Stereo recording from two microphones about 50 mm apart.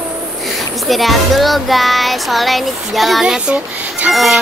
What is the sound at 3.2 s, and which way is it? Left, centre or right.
Speech, centre.